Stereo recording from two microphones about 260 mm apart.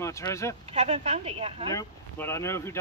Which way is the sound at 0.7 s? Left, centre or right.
Right.